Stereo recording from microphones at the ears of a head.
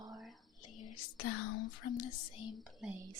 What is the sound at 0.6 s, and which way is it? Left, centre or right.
Speech, left.